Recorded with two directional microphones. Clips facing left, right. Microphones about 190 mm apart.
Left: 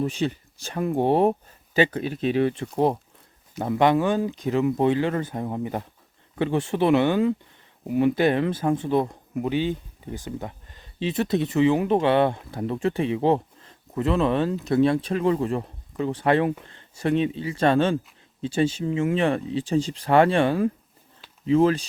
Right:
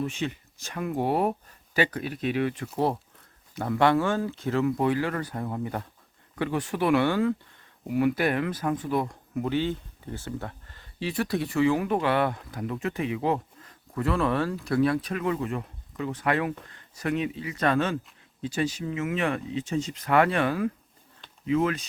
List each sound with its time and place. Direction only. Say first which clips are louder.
0.0 s speech: left 5 dB; 35° left (ahead or behind)
2.7 s speech: left 3 dB; 15° left (ahead or behind)